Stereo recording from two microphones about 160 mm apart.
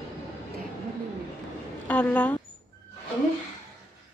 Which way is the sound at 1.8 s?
10° left (ahead or behind).